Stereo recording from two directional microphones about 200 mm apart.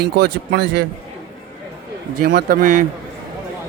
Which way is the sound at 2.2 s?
50° right (ahead or behind).